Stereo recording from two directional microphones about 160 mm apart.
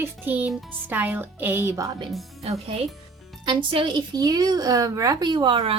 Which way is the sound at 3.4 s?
30° right (ahead or behind).